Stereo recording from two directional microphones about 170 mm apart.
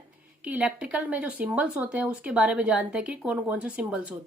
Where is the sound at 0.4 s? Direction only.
5° right (ahead or behind).